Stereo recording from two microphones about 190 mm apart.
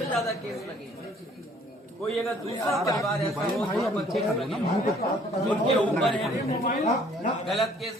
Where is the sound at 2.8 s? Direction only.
15° left (ahead or behind).